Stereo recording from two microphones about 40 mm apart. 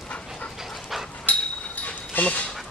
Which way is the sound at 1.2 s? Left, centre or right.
Left.